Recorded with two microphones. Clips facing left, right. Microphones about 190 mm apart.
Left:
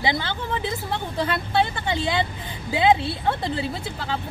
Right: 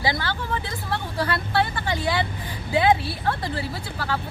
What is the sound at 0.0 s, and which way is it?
Speech, 20° left (ahead or behind).